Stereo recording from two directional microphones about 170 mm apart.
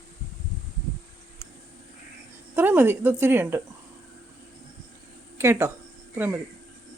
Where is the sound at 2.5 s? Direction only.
10° right (ahead or behind).